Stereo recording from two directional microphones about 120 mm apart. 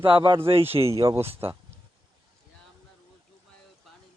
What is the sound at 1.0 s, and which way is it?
Speech, 25° right (ahead or behind).